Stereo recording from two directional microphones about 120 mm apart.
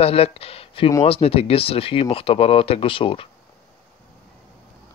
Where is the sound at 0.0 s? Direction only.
55° left (ahead or behind).